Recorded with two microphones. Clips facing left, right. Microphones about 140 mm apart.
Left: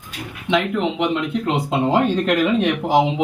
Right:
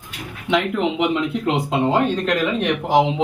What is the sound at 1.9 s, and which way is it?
Speech, 10° left (ahead or behind).